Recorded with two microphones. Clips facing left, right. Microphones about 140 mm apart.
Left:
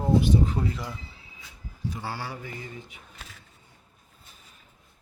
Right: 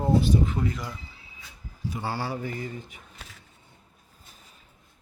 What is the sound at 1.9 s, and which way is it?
Speech, 25° right (ahead or behind).